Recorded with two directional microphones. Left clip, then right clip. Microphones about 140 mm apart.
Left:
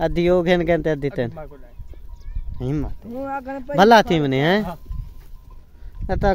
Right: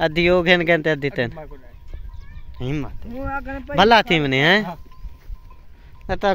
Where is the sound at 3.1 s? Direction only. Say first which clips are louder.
Left 1 dB; 60° left (ahead or behind).